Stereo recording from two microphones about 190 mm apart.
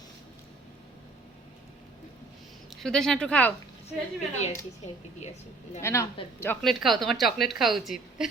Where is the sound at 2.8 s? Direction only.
5° left (ahead or behind).